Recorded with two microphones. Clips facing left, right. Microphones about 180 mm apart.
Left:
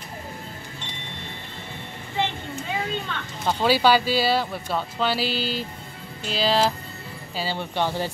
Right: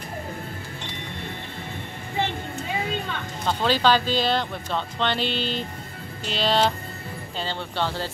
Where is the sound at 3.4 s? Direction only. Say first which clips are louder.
Left 2 dB; 10° left (ahead or behind).